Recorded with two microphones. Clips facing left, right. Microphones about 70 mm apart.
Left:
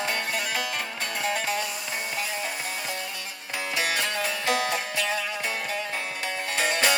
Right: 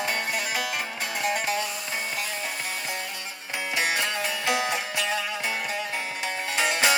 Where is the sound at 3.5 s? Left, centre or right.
Centre.